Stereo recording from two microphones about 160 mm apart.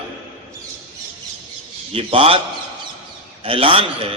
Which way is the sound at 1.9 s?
35° right (ahead or behind).